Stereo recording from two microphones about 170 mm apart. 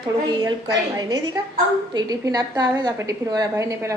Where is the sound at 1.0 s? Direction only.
20° right (ahead or behind).